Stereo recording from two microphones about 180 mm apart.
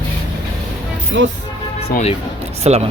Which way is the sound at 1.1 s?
90° right.